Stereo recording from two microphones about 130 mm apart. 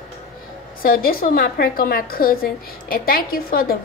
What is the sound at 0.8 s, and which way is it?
A woman's voice, 90° left.